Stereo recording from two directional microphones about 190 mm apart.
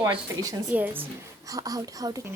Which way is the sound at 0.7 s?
10° right (ahead or behind).